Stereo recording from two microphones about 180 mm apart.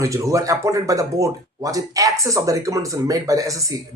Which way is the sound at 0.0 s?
15° right (ahead or behind).